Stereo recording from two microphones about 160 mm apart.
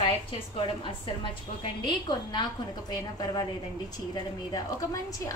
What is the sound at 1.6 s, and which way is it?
Speech, 30° left (ahead or behind).